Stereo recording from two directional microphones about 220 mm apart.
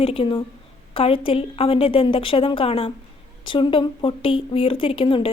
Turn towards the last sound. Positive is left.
turn(degrees=25)  # may be behind; listen again after turning